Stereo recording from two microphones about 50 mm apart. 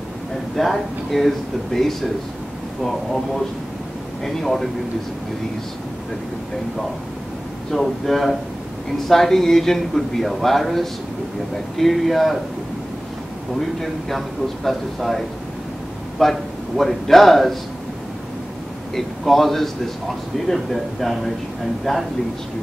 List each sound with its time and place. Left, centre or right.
0.6 s a man's voice: centre
4.2 s a man's voice: centre
7.7 s a man's voice: centre
13.6 s a man's voice: centre
18.9 s a man's voice: centre